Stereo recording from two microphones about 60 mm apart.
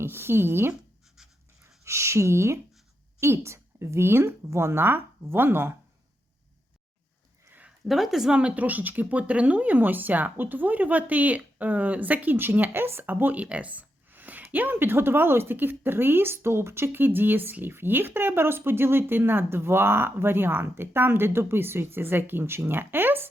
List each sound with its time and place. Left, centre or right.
0.0 s speech: right
0.7 s scratch: centre
1.6 s a woman's voice: right
7.9 s speech: centre; by 23.3 s right